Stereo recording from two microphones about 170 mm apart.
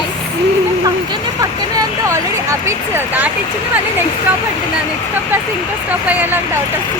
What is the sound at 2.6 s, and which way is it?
Speech, 10° right (ahead or behind).